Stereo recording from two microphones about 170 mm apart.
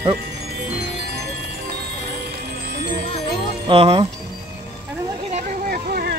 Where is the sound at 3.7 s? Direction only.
35° right (ahead or behind).